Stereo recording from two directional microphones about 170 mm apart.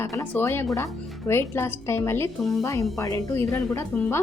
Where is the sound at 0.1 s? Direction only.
10° left (ahead or behind).